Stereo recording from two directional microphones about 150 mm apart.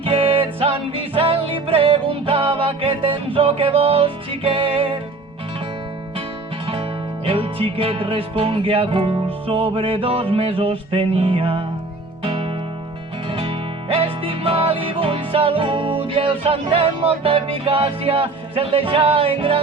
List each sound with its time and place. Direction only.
0.0 s music: 40° right (ahead or behind)
7.3 s music: 40° right (ahead or behind)